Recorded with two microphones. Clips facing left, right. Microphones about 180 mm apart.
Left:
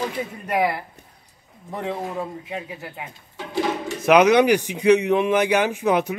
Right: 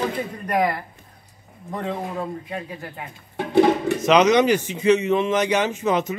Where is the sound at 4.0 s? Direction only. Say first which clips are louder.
Left 3 dB; 10° left (ahead or behind).